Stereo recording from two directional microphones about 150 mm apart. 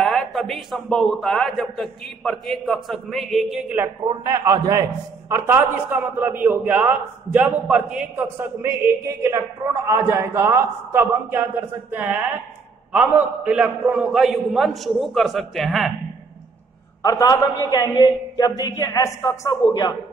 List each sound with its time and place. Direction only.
0.0 s a man's voice: centre (ahead or behind)
4.1 s a man's voice: 25° right (ahead or behind)
5.3 s a man's voice: 15° right (ahead or behind)
8.4 s a man's voice: 20° right (ahead or behind); by 15.9 s centre (ahead or behind)
17.0 s a woman's voice: 20° left (ahead or behind)